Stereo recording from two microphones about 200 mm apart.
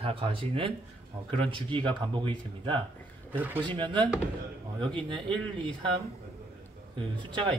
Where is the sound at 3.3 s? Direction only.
10° right (ahead or behind).